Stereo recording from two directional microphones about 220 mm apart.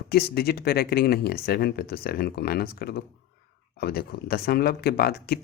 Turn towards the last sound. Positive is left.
turn(degrees=45)  # may be behind; listen again after turning